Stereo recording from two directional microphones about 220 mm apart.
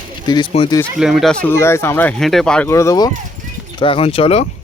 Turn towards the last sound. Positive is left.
turn(degrees=25)  # may be behind; listen again after turning